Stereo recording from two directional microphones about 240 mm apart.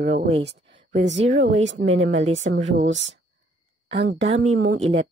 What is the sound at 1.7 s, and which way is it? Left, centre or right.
Speech, right.